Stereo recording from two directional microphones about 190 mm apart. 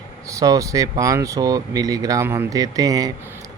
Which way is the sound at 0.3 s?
20° right (ahead or behind).